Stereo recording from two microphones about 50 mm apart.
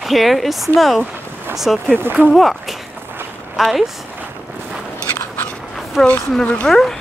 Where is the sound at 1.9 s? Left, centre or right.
Right.